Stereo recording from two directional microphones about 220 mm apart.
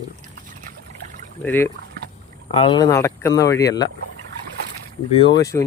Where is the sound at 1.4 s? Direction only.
10° left (ahead or behind).